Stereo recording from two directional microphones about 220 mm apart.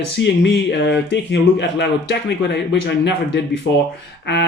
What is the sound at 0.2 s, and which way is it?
Speech, 50° left (ahead or behind).